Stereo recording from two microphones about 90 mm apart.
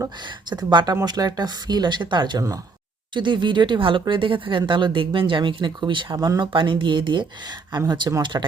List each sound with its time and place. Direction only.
0.5 s speech: 55° right (ahead or behind)
6.1 s speech: 45° right (ahead or behind)
6.5 s speech: 65° right (ahead or behind)